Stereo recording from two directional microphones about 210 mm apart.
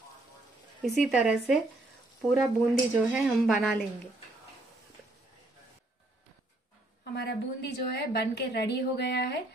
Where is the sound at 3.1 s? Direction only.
Centre (ahead or behind).